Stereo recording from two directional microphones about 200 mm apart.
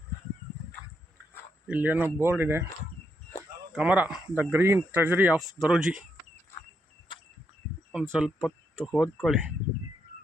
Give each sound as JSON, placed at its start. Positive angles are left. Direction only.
{"t": 1.6, "sound": "speech", "side_deg": -10}
{"t": 3.7, "sound": "speech", "side_deg": -5}
{"t": 7.1, "sound": "a sound", "side_deg": 25}
{"t": 8.1, "sound": "speech", "side_deg": 0}